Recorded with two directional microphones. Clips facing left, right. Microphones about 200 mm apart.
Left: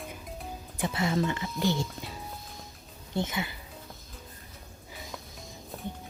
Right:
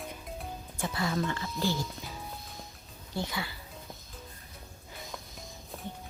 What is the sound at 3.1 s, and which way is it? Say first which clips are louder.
Speech: left 4 dB; 20° left (ahead or behind).